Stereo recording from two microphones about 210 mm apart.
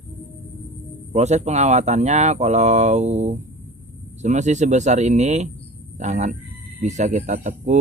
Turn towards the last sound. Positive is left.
turn(degrees=-35)  # may be behind; listen again after turning